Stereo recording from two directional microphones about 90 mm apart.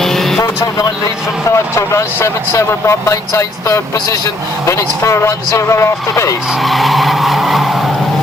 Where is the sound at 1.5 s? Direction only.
35° left (ahead or behind).